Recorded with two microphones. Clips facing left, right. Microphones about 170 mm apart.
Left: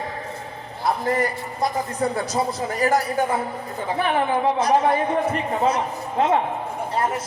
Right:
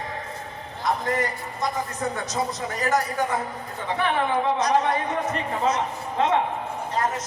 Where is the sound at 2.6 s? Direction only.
30° left (ahead or behind).